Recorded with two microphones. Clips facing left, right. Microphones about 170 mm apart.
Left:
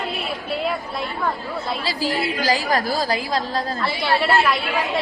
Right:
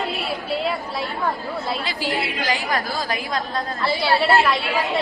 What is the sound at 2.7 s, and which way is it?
A woman's voice, 40° left (ahead or behind).